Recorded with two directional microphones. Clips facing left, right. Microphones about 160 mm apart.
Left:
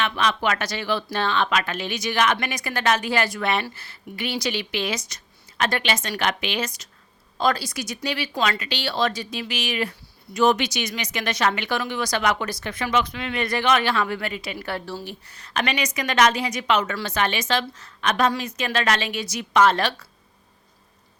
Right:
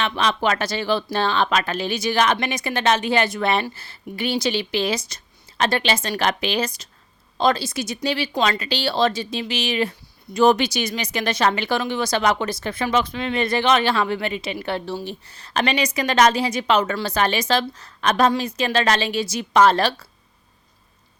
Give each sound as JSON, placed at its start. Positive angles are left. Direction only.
{"t": 0.0, "sound": "speech", "side_deg": -30}